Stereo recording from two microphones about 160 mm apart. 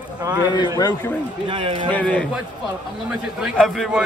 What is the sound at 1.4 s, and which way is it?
Speech, 30° right (ahead or behind).